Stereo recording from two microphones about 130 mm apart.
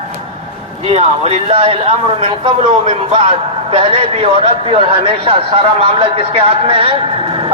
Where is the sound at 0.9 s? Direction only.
50° right (ahead or behind).